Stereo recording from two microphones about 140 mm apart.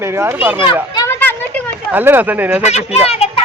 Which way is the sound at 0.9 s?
20° left (ahead or behind).